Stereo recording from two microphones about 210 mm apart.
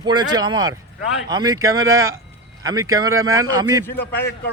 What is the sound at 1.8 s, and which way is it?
Speech, 75° right (ahead or behind).